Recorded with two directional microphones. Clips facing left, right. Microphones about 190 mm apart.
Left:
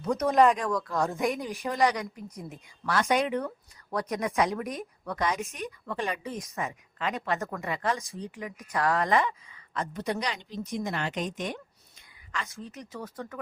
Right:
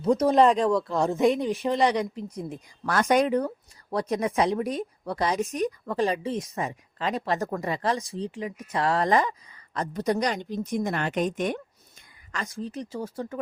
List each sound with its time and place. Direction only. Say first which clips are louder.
0.0 s a woman's voice: right 3 dB; 35° right (ahead or behind)
2.8 s a woman's voice: right 4 dB; 50° right (ahead or behind)
12.3 s a woman's voice: right 5 dB; 35° right (ahead or behind)